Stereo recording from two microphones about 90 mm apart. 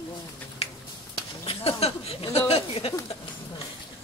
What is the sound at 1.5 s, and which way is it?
Speech, 90° left.